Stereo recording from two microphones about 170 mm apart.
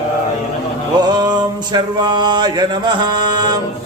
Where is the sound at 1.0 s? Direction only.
25° right (ahead or behind).